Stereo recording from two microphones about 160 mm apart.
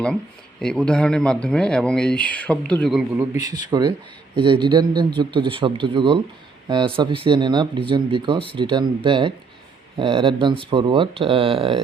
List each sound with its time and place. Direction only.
0.6 s speech: 5° left (ahead or behind)
3.2 s a man's voice: 20° right (ahead or behind)